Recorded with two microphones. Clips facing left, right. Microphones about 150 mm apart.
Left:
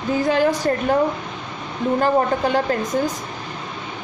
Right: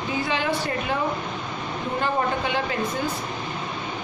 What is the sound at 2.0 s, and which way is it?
Speech, 40° left (ahead or behind).